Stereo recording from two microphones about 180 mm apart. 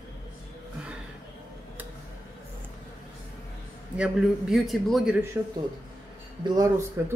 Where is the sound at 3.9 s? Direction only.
Centre (ahead or behind).